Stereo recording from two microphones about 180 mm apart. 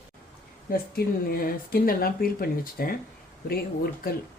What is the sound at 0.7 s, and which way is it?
Speech, 55° left (ahead or behind).